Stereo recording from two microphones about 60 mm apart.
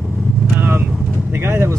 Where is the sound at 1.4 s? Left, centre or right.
Right.